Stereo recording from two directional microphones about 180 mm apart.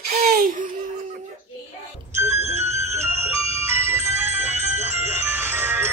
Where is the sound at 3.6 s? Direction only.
10° right (ahead or behind).